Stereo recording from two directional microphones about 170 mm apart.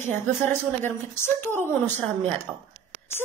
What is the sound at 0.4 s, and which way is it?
A woman's voice, 15° left (ahead or behind).